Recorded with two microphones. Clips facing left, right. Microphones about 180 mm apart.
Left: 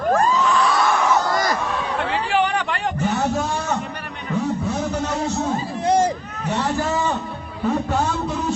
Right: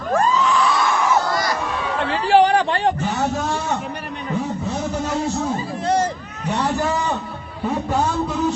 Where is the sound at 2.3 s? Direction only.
35° right (ahead or behind).